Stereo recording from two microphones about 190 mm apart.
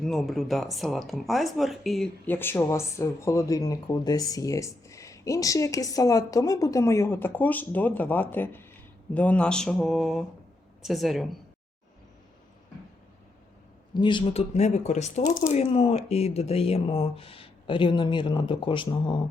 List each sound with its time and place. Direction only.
0.0 s speech: centre (ahead or behind)
9.1 s mantra: 5° left (ahead or behind)
13.9 s speech: 25° left (ahead or behind)